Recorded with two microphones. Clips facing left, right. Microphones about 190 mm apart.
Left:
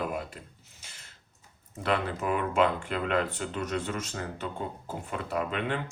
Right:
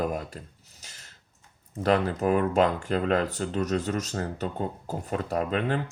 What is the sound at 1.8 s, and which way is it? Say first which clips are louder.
Speech: right 6 dB; 40° right (ahead or behind).